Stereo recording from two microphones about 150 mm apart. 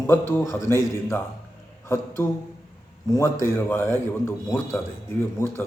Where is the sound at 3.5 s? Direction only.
15° left (ahead or behind).